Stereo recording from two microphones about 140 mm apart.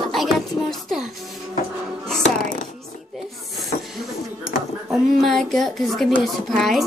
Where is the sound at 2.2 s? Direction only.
70° left (ahead or behind).